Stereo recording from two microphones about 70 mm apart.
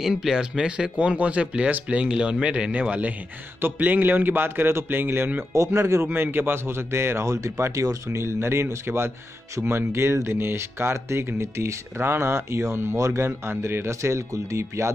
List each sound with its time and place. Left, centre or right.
0.0 s a man's voice: centre; by 5.4 s right
5.5 s speech: right
6.0 s speech: right